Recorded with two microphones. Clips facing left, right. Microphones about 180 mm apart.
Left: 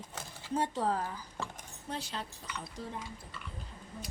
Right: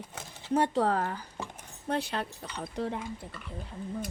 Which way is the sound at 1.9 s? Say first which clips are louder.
Right 8 dB; 60° right (ahead or behind).